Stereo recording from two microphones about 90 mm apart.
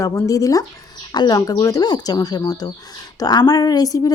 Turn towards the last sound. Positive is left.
turn(degrees=40)  # may be behind; listen again after turning